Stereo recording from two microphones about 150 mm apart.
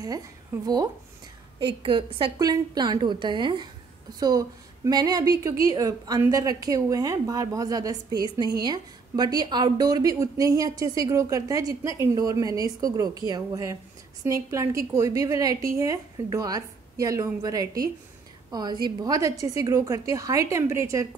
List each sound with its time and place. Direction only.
1.7 s a woman's voice: 35° right (ahead or behind); by 21.1 s 20° right (ahead or behind)